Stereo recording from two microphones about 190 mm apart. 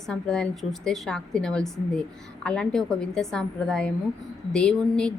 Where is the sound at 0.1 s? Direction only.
5° left (ahead or behind).